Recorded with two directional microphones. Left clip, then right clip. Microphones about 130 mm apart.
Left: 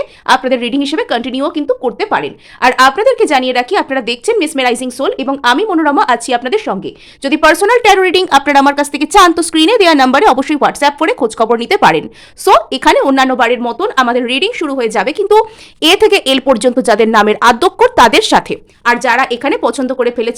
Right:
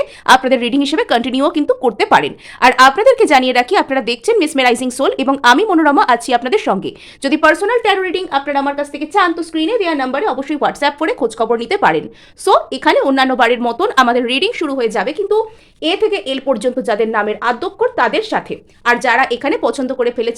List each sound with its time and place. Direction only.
0.0 s speech: 5° right (ahead or behind)
7.4 s a woman's voice: 40° left (ahead or behind); by 10.4 s 90° left
10.5 s speech: 30° left (ahead or behind)
13.4 s a woman's voice: 5° left (ahead or behind); by 15.1 s 30° left (ahead or behind)
15.8 s speech: 90° left; by 16.6 s 70° left (ahead or behind)
16.6 s a woman's voice: 50° left (ahead or behind); by 18.5 s 80° left
18.9 s speech: 25° left (ahead or behind)